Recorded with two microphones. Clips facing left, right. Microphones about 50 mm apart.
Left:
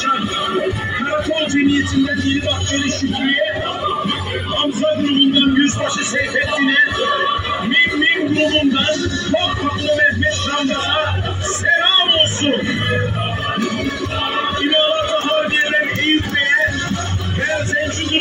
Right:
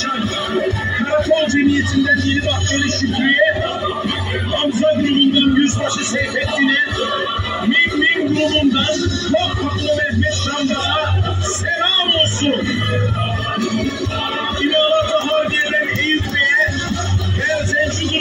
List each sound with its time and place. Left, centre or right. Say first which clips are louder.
0.9 s music: right 5 dB; centre
5.0 s music: even; left
9.9 s music: left 3 dB; left
14.6 s music: right 3 dB; left